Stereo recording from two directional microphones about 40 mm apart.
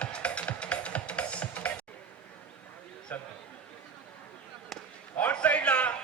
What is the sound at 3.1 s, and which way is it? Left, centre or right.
Speech, left.